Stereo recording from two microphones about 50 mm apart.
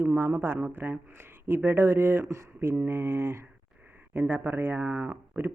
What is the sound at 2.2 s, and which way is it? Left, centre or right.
Speech, right.